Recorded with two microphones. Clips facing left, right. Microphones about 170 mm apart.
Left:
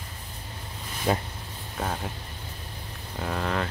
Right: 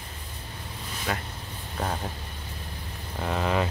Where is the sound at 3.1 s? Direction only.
Centre (ahead or behind).